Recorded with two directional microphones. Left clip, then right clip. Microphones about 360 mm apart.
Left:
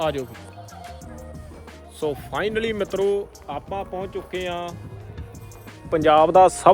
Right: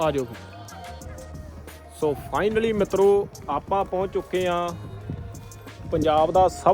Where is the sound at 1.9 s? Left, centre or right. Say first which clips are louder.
Right 1 dB; centre.